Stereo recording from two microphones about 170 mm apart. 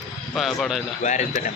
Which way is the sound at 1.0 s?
45° left (ahead or behind).